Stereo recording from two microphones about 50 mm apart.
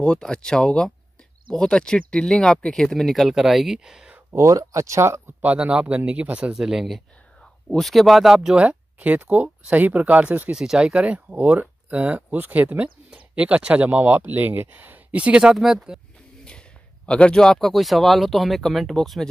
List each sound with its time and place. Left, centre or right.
0.0 s speech: centre
4.3 s speech: right
5.4 s speech: right
6.5 s speech: centre
7.7 s speech: centre
8.6 s speech: right
10.5 s speech: centre
11.0 s speech: right
15.4 s speech: centre
16.4 s speech: centre